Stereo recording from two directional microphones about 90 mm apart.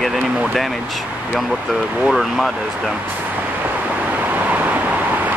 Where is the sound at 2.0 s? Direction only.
Centre (ahead or behind).